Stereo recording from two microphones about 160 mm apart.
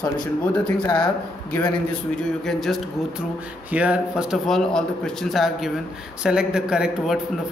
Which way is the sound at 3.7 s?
10° right (ahead or behind).